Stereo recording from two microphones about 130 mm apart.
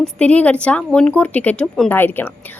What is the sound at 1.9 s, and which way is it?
Speech, 15° left (ahead or behind).